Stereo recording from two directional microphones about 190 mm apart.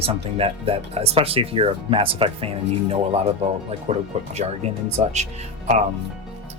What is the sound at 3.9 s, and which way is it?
Speech, 40° right (ahead or behind).